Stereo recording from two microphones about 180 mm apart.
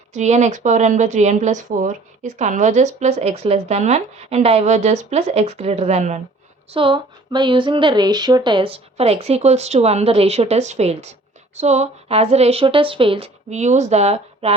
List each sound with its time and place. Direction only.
0.1 s speech: 40° right (ahead or behind)
6.7 s speech: 25° right (ahead or behind)